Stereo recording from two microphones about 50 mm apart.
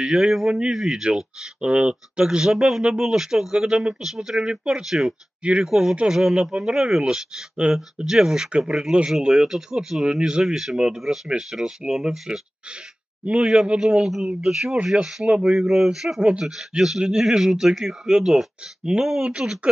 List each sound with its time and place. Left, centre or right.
0.0 s speech: centre
5.4 s speech: right
5.7 s speech: centre
8.5 s speech: centre
13.2 s speech: right